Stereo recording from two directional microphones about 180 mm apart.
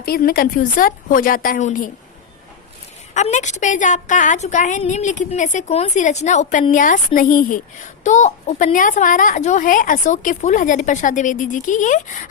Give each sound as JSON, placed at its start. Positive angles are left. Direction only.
{"t": 0.0, "sound": "a woman's voice", "side_deg": 55}
{"t": 3.2, "sound": "a woman's voice", "side_deg": 40}